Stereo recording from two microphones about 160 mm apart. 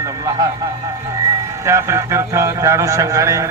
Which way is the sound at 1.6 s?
15° right (ahead or behind).